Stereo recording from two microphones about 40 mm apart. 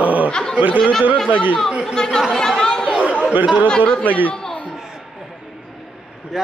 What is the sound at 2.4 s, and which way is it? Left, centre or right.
Chatter, centre.